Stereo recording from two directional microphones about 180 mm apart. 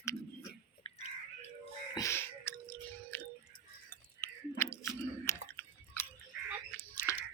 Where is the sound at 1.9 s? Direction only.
15° left (ahead or behind).